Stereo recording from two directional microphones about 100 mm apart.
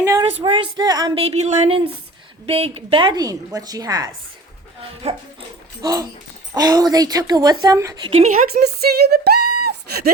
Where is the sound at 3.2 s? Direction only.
40° right (ahead or behind).